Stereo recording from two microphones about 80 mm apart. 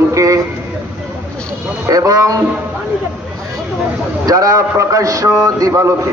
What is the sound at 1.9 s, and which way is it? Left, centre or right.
Music, right.